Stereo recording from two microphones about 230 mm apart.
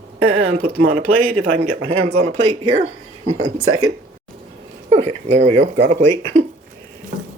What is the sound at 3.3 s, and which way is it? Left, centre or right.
Speech, right.